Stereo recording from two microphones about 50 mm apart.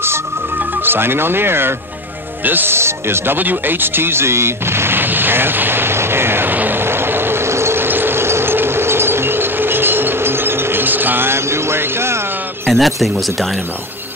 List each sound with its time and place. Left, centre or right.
0.6 s speech: right
2.7 s speech: right
3.3 s artillery fire: right
12.6 s speech: centre